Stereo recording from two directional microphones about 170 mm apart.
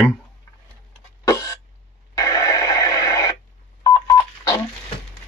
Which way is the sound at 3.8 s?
20° left (ahead or behind).